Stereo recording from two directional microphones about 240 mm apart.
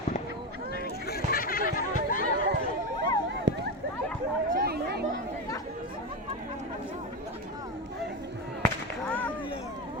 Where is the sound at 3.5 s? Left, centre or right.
Right.